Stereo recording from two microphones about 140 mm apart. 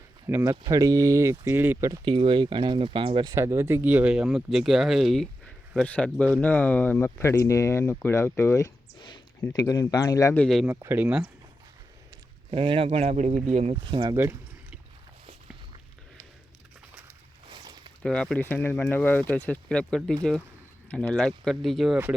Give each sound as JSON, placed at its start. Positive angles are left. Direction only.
{"t": 0.3, "sound": "speech", "side_deg": -15}
{"t": 0.5, "sound": "speech", "side_deg": -30}
{"t": 1.9, "sound": "speech", "side_deg": -35}
{"t": 3.3, "sound": "speech", "side_deg": -20}
{"t": 9.0, "sound": "a sound", "side_deg": 35}
{"t": 9.4, "sound": "speech", "side_deg": 25}
{"t": 10.3, "sound": "speech", "side_deg": 5}
{"t": 10.7, "sound": "speech", "side_deg": -15}
{"t": 12.5, "sound": "speech", "side_deg": -40}
{"t": 13.8, "sound": "speech", "side_deg": -30}
{"t": 14.2, "sound": "a sound", "side_deg": -15}
{"t": 17.5, "sound": "a sound", "side_deg": -35}
{"t": 18.0, "sound": "speech", "side_deg": 5}